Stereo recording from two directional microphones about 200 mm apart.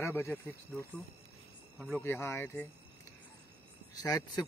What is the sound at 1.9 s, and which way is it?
Speech, 10° left (ahead or behind).